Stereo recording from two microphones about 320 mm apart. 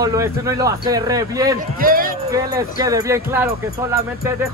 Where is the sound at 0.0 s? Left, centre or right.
Centre.